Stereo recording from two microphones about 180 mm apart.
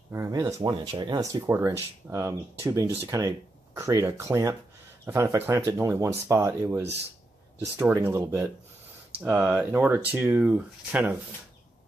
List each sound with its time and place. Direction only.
0.1 s speech: 20° right (ahead or behind)